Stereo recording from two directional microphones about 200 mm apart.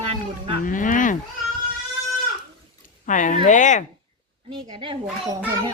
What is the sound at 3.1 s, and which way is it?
Speech, 40° left (ahead or behind).